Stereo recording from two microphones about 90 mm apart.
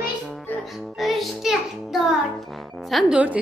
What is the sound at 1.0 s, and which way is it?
Child singing, centre (ahead or behind).